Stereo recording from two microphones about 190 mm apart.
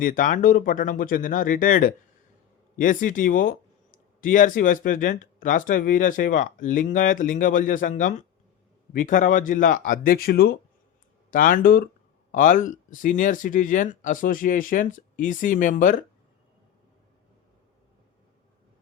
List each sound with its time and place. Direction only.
0.0 s speech: 45° left (ahead or behind)